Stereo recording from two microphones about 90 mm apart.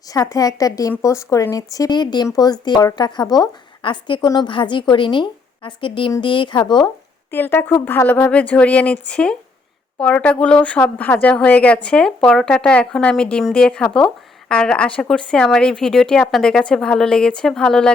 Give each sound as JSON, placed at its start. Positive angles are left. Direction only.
{"t": 0.1, "sound": "speech", "side_deg": 40}
{"t": 3.8, "sound": "a woman's voice", "side_deg": 65}
{"t": 7.3, "sound": "speech", "side_deg": 25}